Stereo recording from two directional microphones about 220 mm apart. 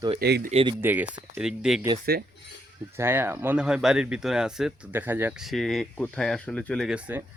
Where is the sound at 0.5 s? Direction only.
20° right (ahead or behind).